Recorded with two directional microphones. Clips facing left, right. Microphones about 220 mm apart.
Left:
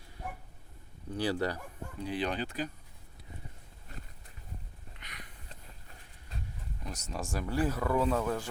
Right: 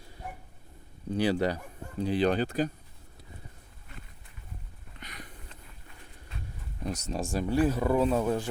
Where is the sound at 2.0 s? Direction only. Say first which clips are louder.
Right 8 dB; 35° right (ahead or behind).